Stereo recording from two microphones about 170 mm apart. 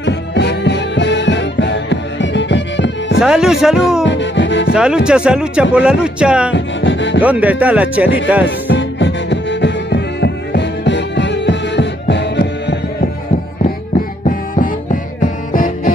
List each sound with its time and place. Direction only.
0.0 s music: 85° left
3.2 s speech: 5° right (ahead or behind)
4.0 s music: 90° left
4.7 s speech: 5° right (ahead or behind)
6.5 s music: 90° left
7.2 s speech: 10° right (ahead or behind)
8.5 s music: 90° left
14.2 s music: 50° left (ahead or behind)